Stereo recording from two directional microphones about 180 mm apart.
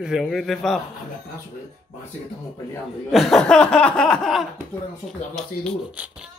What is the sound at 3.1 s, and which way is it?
Speech, centre (ahead or behind).